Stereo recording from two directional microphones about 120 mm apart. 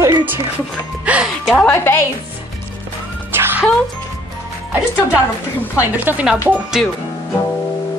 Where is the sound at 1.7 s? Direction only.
20° left (ahead or behind).